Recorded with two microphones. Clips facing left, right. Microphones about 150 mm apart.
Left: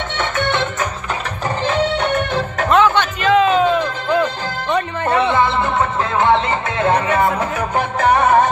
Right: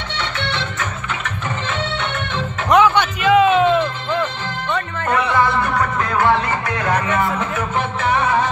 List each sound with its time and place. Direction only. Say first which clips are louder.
0.2 s music: left 6 dB; 50° left (ahead or behind)
2.7 s music: right 1 dB; 10° right (ahead or behind)
4.7 s music: left 4 dB; 25° left (ahead or behind)
7.3 s music: left 2 dB; 40° left (ahead or behind)